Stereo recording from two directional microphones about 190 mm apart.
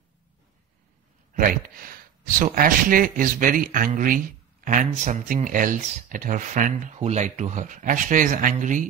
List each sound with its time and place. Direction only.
1.3 s speech: 45° right (ahead or behind)